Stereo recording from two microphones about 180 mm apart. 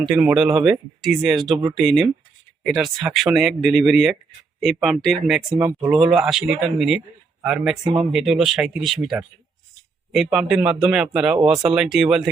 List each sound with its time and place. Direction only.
0.0 s speech: 5° right (ahead or behind)